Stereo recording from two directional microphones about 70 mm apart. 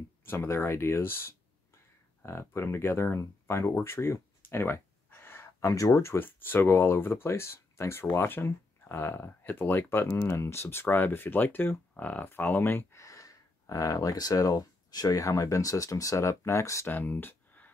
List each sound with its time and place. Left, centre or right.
0.2 s speech: left
3.8 s a sound: left
6.1 s speech: left
13.0 s speech: left
16.9 s speech: left